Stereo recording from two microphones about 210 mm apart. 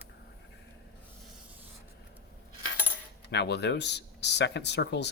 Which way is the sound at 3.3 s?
55° left (ahead or behind).